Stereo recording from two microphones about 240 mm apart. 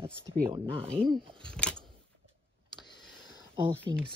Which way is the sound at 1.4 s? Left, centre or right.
Centre.